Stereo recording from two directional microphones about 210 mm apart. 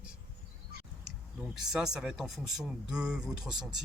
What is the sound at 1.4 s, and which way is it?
Speech, 5° right (ahead or behind).